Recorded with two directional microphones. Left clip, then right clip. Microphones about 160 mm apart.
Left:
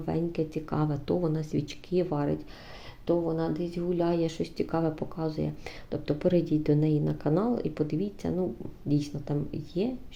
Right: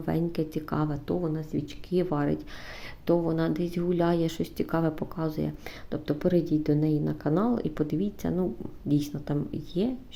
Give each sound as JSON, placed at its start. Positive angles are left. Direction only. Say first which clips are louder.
{"t": 0.0, "sound": "speech", "louder": "right 1 dB", "side_deg": -15}
{"t": 1.9, "sound": "speech", "louder": "right 1 dB", "side_deg": -15}